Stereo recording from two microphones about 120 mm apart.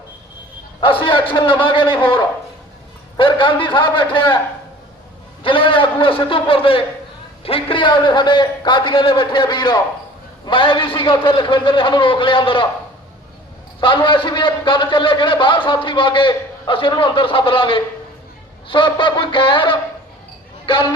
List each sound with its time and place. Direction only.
0.8 s a man's voice: 45° left (ahead or behind)
5.4 s a man's voice: 45° left (ahead or behind)
13.8 s a man's voice: 45° left (ahead or behind)